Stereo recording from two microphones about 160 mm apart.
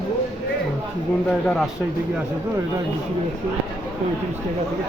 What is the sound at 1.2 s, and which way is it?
Speech, 5° left (ahead or behind).